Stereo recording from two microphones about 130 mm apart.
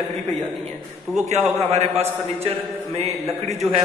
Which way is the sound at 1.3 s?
55° right (ahead or behind).